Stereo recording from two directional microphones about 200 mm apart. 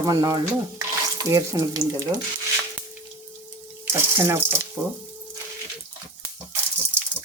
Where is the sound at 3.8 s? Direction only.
10° right (ahead or behind).